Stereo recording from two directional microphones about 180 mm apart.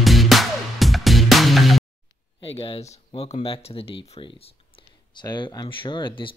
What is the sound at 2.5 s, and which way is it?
Speech, 30° left (ahead or behind).